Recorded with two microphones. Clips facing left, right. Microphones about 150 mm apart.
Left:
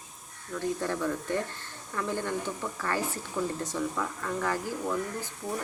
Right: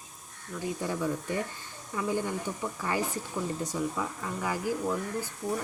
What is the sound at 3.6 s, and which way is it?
Speech, 10° right (ahead or behind).